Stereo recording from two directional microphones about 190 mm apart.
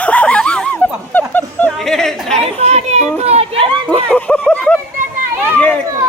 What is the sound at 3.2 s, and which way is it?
Chatter, 30° right (ahead or behind).